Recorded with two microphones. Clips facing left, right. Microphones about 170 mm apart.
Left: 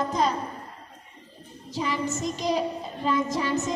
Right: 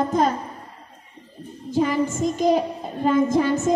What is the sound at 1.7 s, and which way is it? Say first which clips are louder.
A woman's voice: right 7 dB; 50° right (ahead or behind).